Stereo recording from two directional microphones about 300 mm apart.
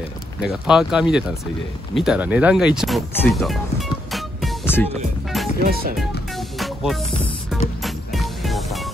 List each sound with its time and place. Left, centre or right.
0.4 s speech: centre
4.1 s music: centre
5.6 s speech: right
6.6 s music: centre